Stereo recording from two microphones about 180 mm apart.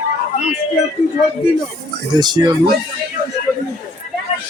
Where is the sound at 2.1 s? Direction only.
25° right (ahead or behind).